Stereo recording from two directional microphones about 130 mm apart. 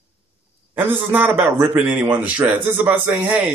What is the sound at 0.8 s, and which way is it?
Speech, 15° right (ahead or behind).